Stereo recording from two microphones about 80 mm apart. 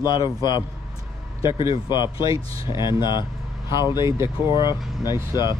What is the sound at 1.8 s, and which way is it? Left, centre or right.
Speech, left.